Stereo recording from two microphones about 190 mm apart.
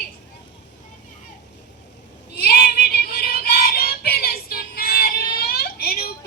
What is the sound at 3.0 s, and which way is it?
Music, 55° left (ahead or behind).